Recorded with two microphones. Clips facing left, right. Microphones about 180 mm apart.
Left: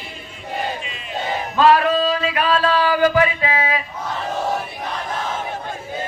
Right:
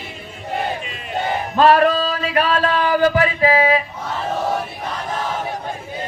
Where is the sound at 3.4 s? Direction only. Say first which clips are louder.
Right 6 dB; 35° right (ahead or behind).